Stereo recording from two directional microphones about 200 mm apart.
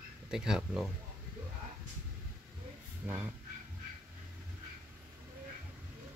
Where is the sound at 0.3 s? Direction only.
5° right (ahead or behind).